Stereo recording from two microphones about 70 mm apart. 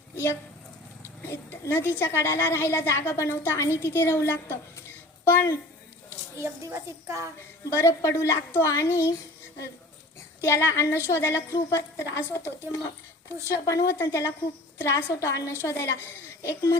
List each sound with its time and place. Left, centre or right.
1.2 s a woman's voice: left
6.1 s a woman's voice: right
7.7 s a woman's voice: left
10.4 s a woman's voice: left